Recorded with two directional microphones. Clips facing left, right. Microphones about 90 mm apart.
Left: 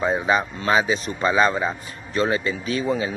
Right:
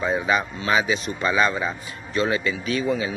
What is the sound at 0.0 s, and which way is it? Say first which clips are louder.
A man's voice: left 2 dB; 30° left (ahead or behind).